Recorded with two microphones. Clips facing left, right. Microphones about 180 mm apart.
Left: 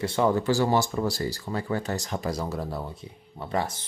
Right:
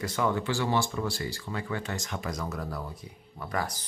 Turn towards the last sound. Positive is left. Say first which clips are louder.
# left 4 dB
turn(degrees=25)  # may be behind; listen again after turning